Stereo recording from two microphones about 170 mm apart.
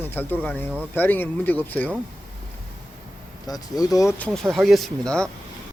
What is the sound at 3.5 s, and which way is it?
Speech, 20° left (ahead or behind).